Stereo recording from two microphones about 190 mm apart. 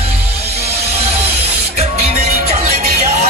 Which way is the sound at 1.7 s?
35° right (ahead or behind).